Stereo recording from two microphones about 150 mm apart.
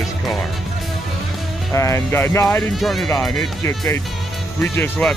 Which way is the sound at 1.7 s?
20° left (ahead or behind).